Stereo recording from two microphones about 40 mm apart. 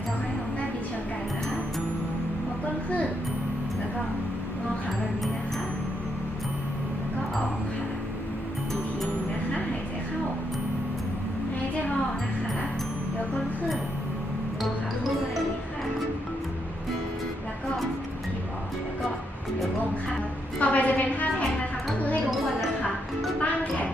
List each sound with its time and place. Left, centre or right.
20.6 s a sound: left
21.9 s music: left
23.4 s music: left